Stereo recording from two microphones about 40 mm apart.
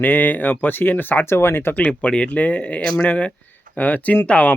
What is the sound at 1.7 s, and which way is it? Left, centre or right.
Speech, left.